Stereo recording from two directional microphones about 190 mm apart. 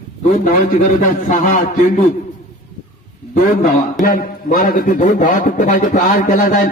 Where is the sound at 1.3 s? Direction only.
40° left (ahead or behind).